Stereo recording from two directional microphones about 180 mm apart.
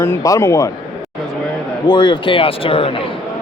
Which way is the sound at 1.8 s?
25° left (ahead or behind).